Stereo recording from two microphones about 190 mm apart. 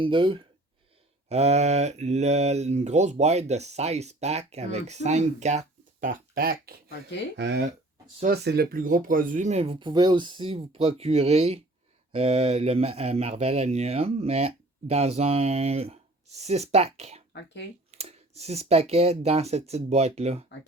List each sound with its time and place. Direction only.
0.0 s speech: 25° right (ahead or behind); by 6.9 s 50° right (ahead or behind)
7.3 s speech: 65° right (ahead or behind); by 17.2 s 35° right (ahead or behind)
17.3 s speech: 65° left (ahead or behind)
17.9 s speech: 35° right (ahead or behind)